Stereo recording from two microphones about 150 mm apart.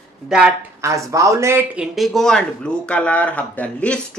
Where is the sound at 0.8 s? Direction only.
20° right (ahead or behind).